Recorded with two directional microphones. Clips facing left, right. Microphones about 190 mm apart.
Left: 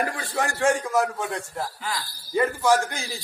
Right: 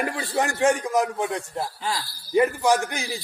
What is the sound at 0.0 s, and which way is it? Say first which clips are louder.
A man's voice: right 2 dB; 20° right (ahead or behind).